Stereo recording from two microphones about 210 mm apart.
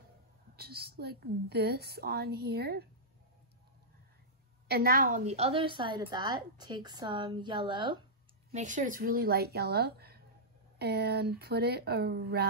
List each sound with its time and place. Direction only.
0.6 s a woman's voice: 50° right (ahead or behind)
4.6 s a woman's voice: 45° right (ahead or behind); by 8.0 s 25° right (ahead or behind)
8.5 s a woman's voice: 35° right (ahead or behind)